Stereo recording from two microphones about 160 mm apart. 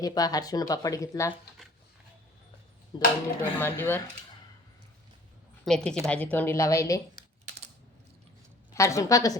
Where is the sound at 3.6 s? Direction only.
15° left (ahead or behind).